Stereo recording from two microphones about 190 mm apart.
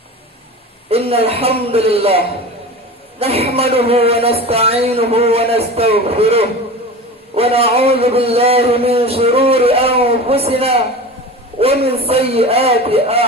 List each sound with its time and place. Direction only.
0.9 s a man's voice: 30° right (ahead or behind)